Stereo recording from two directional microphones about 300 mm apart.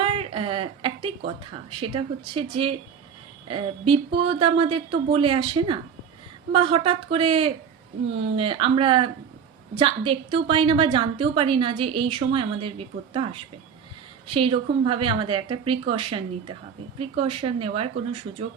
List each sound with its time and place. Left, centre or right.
0.0 s a sound: centre
1.8 s a woman's voice: centre
6.5 s a woman's voice: centre